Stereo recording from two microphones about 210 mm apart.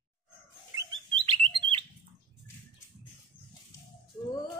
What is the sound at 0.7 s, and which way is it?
Rodents, 25° right (ahead or behind).